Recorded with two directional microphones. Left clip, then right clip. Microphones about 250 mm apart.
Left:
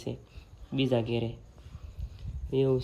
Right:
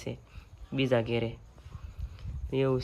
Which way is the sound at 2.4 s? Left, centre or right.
Right.